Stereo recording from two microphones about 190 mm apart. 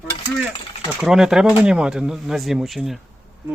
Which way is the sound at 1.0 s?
Centre (ahead or behind).